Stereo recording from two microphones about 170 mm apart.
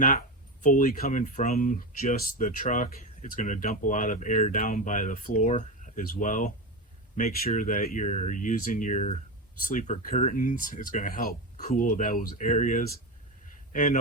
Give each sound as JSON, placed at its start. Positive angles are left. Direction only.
{"t": 0.0, "sound": "speech", "side_deg": 50}